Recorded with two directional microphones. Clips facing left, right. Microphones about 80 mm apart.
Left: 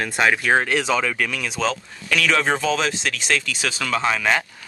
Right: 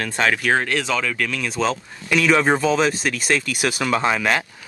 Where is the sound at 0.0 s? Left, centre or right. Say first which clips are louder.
Left 1 dB; centre.